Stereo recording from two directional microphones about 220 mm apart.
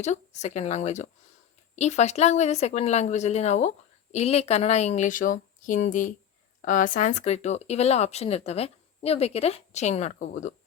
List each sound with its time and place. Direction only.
0.0 s speech: 30° left (ahead or behind)